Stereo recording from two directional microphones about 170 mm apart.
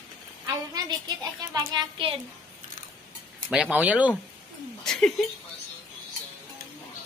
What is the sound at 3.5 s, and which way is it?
Speech, 5° right (ahead or behind).